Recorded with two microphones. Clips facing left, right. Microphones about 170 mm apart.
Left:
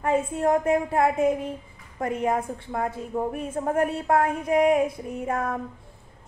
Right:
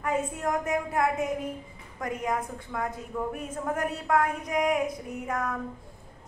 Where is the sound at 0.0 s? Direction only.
30° left (ahead or behind).